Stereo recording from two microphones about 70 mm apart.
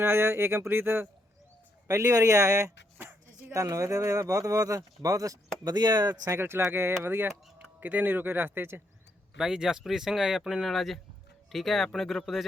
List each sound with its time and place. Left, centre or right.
0.0 s speech: right
1.9 s speech: right
3.0 s music: right
3.5 s speech: right
5.7 s speech: right
6.3 s speech: right
9.4 s speech: centre